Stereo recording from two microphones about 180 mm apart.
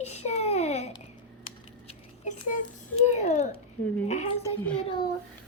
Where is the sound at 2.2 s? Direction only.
45° left (ahead or behind).